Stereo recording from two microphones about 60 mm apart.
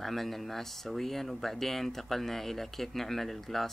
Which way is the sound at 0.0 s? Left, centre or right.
Centre.